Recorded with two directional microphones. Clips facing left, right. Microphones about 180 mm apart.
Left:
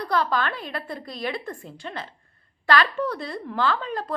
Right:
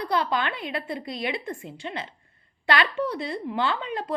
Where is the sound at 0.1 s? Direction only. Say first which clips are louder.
Left 2 dB; 20° right (ahead or behind).